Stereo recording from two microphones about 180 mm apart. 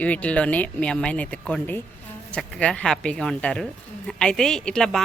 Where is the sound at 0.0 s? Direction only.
5° left (ahead or behind).